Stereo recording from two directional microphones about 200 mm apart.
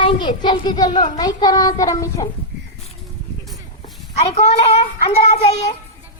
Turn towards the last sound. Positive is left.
turn(degrees=30)  # may be behind; listen again after turning